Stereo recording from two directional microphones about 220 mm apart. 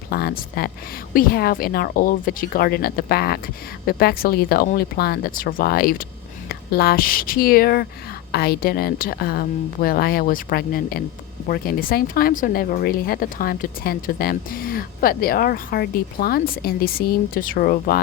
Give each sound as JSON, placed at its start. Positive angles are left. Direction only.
{"t": 0.1, "sound": "a woman's voice", "side_deg": 45}